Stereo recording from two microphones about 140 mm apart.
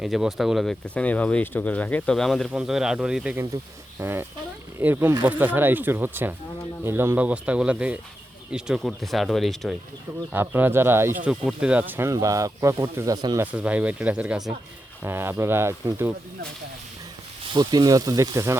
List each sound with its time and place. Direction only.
0.0 s speech: centre (ahead or behind)
3.3 s speech: 20° right (ahead or behind); by 9.7 s centre (ahead or behind)
10.3 s speech: 15° right (ahead or behind)
11.3 s speech: 5° right (ahead or behind)
13.4 s speech: 10° right (ahead or behind)
17.4 s speech: 30° right (ahead or behind)